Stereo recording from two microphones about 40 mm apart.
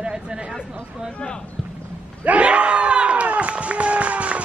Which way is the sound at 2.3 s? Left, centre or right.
Right.